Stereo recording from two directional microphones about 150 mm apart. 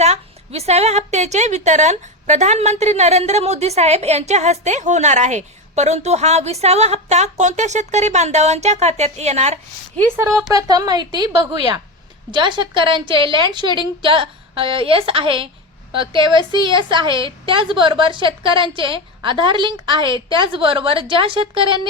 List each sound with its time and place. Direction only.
0.0 s a woman's voice: 45° right (ahead or behind)
10.2 s speech: centre (ahead or behind)
10.5 s a woman's voice: 25° right (ahead or behind)